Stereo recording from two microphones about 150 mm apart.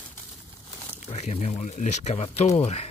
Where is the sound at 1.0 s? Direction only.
45° left (ahead or behind).